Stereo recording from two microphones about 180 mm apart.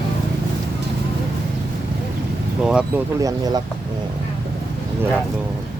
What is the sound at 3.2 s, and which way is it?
Speech, 20° right (ahead or behind).